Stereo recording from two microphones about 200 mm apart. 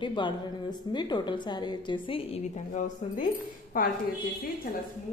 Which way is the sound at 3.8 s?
45° left (ahead or behind).